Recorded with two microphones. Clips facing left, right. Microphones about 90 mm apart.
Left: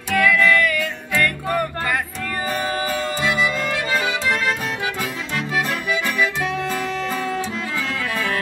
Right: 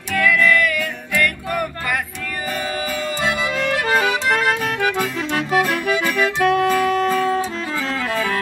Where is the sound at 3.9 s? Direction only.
55° right (ahead or behind).